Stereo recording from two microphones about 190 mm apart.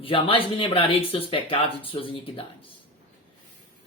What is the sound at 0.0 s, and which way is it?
Speech, 30° left (ahead or behind).